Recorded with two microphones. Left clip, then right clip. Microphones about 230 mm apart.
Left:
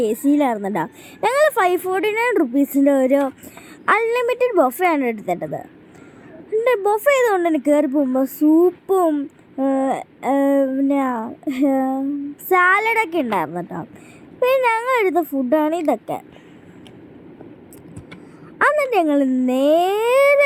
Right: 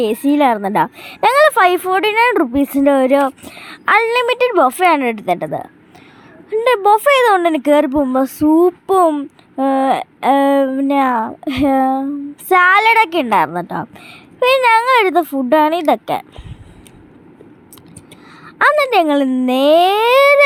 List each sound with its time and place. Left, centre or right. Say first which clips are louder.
0.3 s a woman's voice: right 7 dB; right
18.6 s a woman's voice: right 5 dB; right